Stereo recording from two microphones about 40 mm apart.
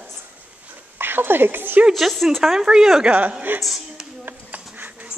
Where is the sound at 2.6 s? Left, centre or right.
Centre.